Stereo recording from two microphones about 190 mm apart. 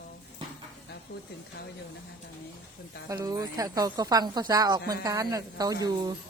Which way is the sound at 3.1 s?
20° right (ahead or behind).